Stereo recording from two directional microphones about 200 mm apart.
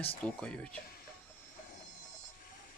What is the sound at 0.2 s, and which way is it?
Speech, 5° left (ahead or behind).